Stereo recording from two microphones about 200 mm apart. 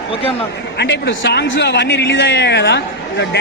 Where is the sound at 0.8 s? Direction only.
60° left (ahead or behind).